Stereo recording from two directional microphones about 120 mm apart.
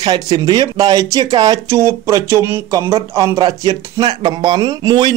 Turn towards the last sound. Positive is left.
turn(degrees=-40)  # may be behind; listen again after turning